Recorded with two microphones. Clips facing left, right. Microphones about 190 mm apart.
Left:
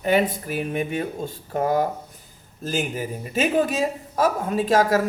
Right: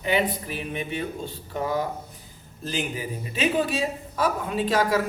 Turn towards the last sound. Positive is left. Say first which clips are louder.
# left 3 dB
turn(degrees=45)  # may be behind; listen again after turning